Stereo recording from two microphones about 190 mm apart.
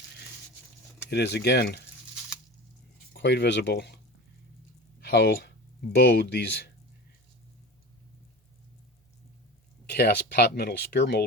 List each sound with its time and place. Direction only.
1.1 s speech: 60° left (ahead or behind)
3.1 s speech: 60° left (ahead or behind)
9.9 s speech: 60° left (ahead or behind)